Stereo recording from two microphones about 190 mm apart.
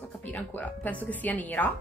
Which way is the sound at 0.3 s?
10° left (ahead or behind).